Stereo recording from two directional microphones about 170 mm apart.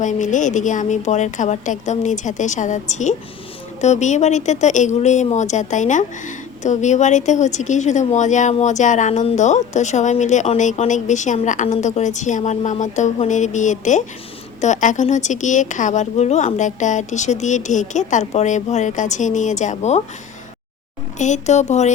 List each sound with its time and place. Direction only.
0.0 s speech: 45° left (ahead or behind)
21.2 s speech: 45° left (ahead or behind)